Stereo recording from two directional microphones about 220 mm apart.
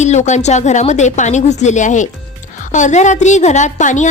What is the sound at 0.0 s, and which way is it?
A woman's voice, 30° left (ahead or behind).